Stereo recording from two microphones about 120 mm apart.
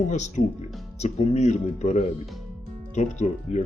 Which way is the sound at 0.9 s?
65° left (ahead or behind).